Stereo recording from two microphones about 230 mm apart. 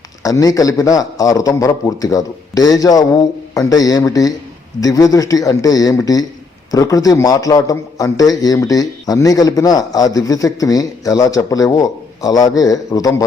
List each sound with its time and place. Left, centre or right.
0.2 s a man's voice: centre